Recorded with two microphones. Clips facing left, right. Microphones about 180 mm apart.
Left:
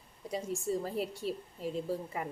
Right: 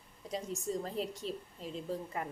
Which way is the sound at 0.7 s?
5° left (ahead or behind).